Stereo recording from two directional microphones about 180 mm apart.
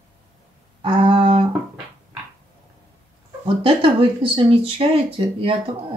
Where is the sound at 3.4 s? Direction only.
30° right (ahead or behind).